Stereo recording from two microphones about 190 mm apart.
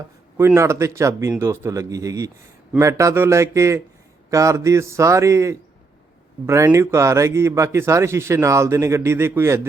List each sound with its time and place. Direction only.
0.3 s a man's voice: 15° right (ahead or behind)